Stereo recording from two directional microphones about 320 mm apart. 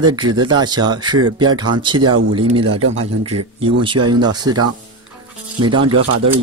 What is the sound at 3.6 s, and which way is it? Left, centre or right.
Speech, centre.